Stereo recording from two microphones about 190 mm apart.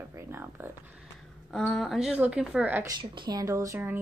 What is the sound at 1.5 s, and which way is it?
A woman's voice, 5° left (ahead or behind).